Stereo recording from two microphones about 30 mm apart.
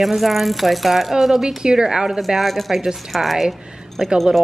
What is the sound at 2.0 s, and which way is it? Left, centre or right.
A woman's voice, centre.